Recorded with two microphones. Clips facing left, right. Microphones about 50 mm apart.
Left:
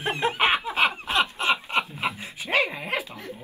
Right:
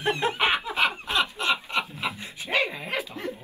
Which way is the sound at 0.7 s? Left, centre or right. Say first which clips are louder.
Left 2 dB; centre.